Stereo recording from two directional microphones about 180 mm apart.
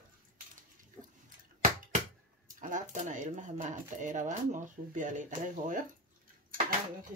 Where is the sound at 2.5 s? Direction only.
45° right (ahead or behind).